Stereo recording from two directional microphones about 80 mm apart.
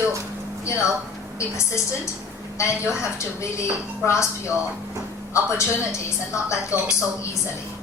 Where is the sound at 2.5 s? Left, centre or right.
Left.